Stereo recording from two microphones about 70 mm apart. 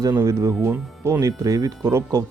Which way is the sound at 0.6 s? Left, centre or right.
Right.